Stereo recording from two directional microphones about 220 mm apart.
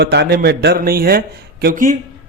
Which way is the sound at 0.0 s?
50° right (ahead or behind).